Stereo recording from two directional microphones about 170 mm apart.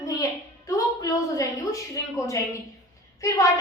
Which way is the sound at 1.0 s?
20° left (ahead or behind).